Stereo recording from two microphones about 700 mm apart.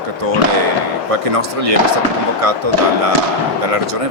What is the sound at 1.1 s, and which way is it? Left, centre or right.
Speech, right.